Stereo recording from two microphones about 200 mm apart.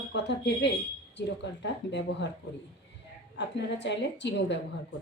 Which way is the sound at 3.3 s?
60° left (ahead or behind).